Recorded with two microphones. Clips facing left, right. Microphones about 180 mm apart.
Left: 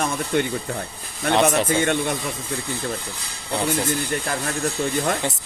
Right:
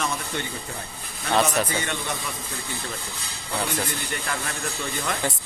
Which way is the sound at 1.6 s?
50° left (ahead or behind).